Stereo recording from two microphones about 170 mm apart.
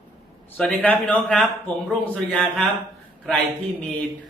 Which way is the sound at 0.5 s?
10° left (ahead or behind).